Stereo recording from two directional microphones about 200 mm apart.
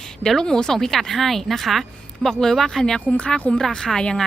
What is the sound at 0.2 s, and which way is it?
Speech, 5° left (ahead or behind).